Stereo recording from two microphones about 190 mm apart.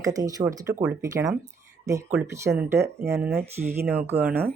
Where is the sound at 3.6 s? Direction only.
55° right (ahead or behind).